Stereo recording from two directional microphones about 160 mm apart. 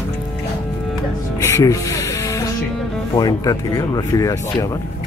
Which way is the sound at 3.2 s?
25° left (ahead or behind).